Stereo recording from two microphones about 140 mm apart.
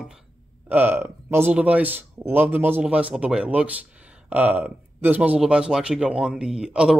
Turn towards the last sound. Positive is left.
turn(degrees=-5)  # may be behind; listen again after turning